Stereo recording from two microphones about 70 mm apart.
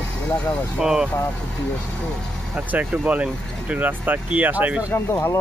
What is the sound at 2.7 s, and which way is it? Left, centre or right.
Speech, right.